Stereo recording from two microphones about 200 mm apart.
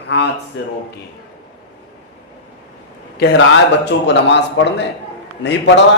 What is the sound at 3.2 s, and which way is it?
A man's voice, 65° left (ahead or behind).